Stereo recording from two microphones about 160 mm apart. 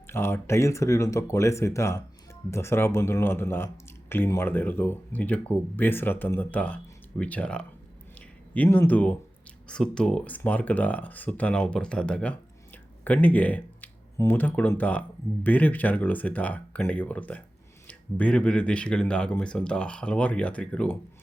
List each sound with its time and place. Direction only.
0.1 s speech: 15° left (ahead or behind)